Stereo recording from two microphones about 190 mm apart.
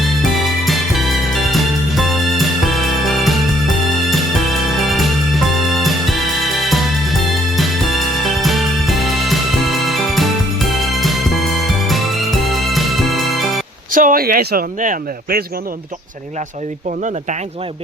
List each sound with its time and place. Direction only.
0.0 s music: centre (ahead or behind)
13.9 s speech: 45° right (ahead or behind)